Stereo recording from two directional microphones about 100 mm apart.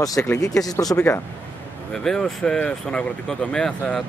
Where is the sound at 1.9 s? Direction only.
5° left (ahead or behind).